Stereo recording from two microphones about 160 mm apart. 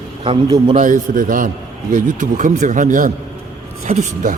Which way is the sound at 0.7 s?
50° right (ahead or behind).